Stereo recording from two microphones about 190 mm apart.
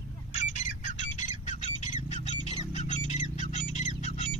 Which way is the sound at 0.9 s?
40° left (ahead or behind).